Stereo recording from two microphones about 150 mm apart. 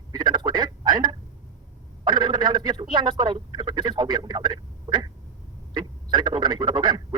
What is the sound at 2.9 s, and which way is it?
Speech, 30° right (ahead or behind).